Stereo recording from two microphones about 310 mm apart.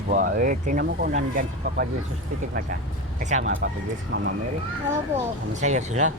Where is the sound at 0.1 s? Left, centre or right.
Right.